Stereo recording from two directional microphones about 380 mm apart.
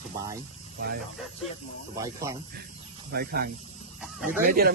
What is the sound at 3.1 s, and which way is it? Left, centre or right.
Speech, right.